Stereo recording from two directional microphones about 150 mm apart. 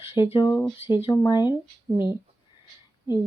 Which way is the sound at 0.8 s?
35° left (ahead or behind).